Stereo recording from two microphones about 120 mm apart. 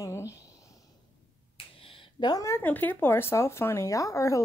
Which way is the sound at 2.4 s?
20° left (ahead or behind).